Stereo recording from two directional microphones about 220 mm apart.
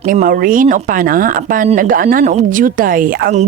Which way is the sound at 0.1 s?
40° right (ahead or behind).